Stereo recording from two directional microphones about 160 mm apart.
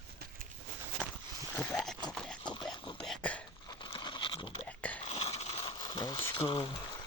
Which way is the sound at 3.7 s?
30° left (ahead or behind).